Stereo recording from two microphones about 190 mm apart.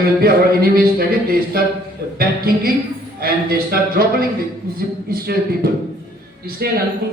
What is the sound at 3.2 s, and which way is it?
Speech, 50° right (ahead or behind).